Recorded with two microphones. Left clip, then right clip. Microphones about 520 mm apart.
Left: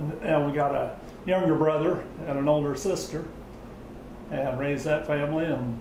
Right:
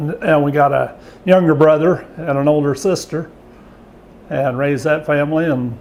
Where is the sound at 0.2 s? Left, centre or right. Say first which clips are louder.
Right 12 dB; right.